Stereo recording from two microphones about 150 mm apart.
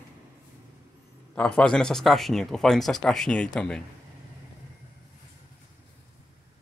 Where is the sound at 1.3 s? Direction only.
5° left (ahead or behind).